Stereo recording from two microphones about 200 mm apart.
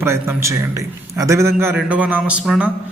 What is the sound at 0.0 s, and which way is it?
Mantra, 15° right (ahead or behind).